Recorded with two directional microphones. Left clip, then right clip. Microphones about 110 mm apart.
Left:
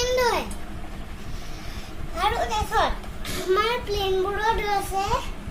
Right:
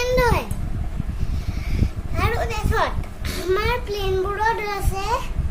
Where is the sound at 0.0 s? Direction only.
10° right (ahead or behind).